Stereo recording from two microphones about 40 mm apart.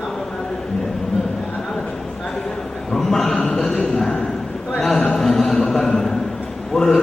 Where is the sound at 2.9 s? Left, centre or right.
Centre.